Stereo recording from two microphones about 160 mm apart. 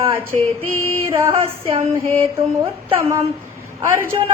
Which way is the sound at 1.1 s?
15° right (ahead or behind).